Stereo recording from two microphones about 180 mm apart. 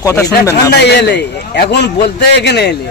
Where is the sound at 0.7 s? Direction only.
70° left (ahead or behind).